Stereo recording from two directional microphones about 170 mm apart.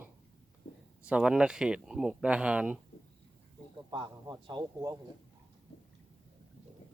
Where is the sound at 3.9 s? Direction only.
25° right (ahead or behind).